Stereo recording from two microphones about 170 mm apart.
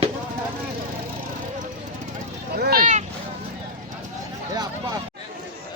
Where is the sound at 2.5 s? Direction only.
65° right (ahead or behind).